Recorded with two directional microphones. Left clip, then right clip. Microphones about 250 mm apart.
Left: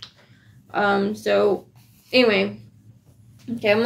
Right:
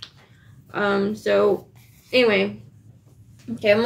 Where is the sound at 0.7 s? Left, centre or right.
Centre.